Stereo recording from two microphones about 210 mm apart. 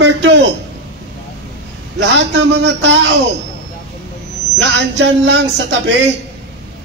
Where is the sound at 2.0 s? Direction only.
55° right (ahead or behind).